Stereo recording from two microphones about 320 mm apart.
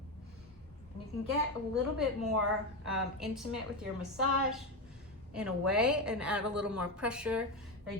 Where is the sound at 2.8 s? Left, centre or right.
Centre.